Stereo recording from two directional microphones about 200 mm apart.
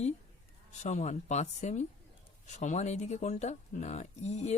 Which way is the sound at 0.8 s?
35° left (ahead or behind).